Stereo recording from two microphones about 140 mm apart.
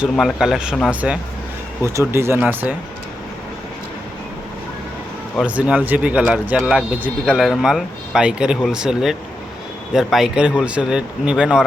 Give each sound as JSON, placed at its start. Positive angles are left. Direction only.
{"t": 0.0, "sound": "speech", "side_deg": 0}
{"t": 5.5, "sound": "speech", "side_deg": -10}